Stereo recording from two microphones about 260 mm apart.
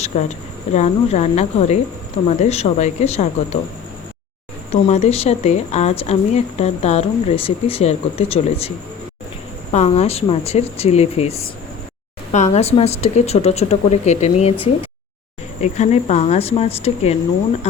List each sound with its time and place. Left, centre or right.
0.0 s speech: left
4.7 s speech: left
9.7 s speech: left
15.6 s speech: left